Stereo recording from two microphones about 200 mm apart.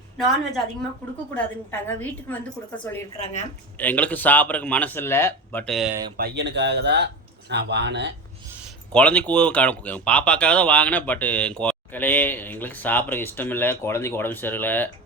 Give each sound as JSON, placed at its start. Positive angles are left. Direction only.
{"t": 1.3, "sound": "speech", "side_deg": 10}
{"t": 5.9, "sound": "speech", "side_deg": -20}
{"t": 6.1, "sound": "speech", "side_deg": -55}
{"t": 8.9, "sound": "speech", "side_deg": 5}